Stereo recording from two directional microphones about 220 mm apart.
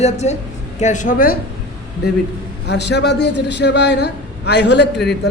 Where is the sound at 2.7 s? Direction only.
50° left (ahead or behind).